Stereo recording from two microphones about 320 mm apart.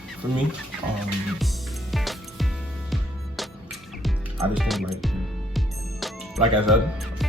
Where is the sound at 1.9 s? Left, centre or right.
Centre.